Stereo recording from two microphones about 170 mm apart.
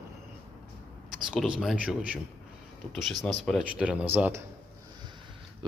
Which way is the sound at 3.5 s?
Centre (ahead or behind).